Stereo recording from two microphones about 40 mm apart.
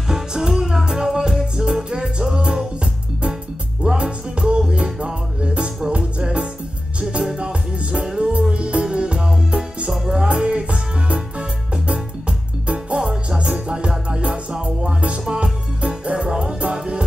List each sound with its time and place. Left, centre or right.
0.1 s music: centre
8.3 s music: right
13.0 s music: centre
13.4 s music: right